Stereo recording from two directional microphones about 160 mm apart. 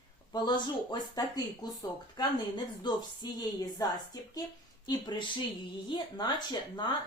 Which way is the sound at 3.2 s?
25° left (ahead or behind).